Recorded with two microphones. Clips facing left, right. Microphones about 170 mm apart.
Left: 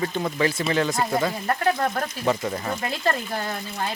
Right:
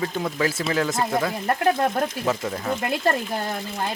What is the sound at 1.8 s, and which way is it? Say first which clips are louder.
Speech: right 3 dB; 25° right (ahead or behind).